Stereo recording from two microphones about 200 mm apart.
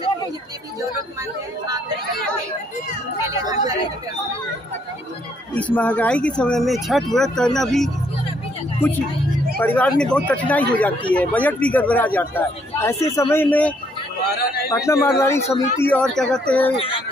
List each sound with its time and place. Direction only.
3.2 s chatter: 20° right (ahead or behind)
5.5 s speech: 5° left (ahead or behind)
9.6 s a man's voice: 10° left (ahead or behind)
16.7 s a child's voice: 30° left (ahead or behind)